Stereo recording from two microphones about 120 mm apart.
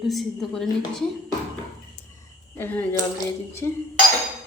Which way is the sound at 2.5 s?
15° left (ahead or behind).